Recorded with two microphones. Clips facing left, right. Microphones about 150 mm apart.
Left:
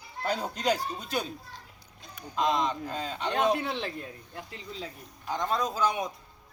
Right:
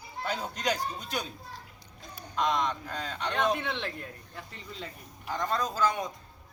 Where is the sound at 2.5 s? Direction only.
Centre (ahead or behind).